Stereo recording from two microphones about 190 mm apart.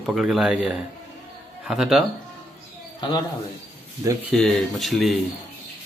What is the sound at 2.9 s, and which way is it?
Speech, 20° left (ahead or behind).